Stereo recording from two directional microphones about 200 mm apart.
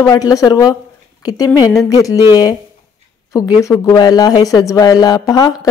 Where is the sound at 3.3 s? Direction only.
15° left (ahead or behind).